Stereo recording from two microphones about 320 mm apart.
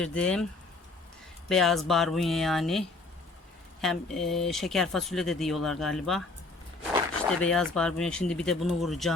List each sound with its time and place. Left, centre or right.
0.0 s speech: centre
1.5 s speech: centre
7.4 s speech: centre